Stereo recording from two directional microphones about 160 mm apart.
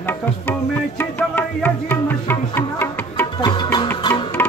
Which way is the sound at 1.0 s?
10° left (ahead or behind).